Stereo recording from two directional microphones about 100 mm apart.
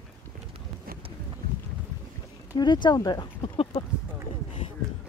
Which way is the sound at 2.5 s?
50° left (ahead or behind).